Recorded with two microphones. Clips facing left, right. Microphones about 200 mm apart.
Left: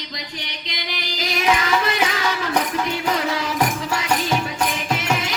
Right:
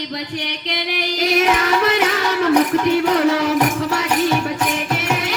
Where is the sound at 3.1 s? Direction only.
65° right (ahead or behind).